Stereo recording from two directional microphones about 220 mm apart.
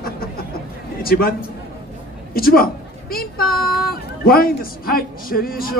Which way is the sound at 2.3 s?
40° left (ahead or behind).